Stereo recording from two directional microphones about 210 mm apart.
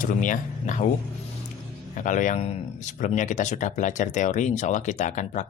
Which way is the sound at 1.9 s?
40° left (ahead or behind).